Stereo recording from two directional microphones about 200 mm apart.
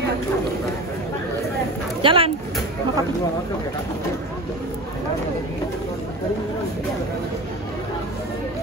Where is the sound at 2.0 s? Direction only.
25° right (ahead or behind).